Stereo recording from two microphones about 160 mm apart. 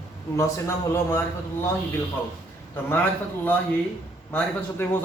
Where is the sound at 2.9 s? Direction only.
10° left (ahead or behind).